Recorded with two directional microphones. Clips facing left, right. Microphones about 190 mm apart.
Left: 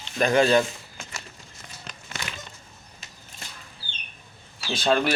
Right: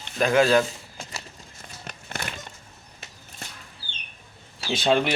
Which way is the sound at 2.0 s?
55° right (ahead or behind).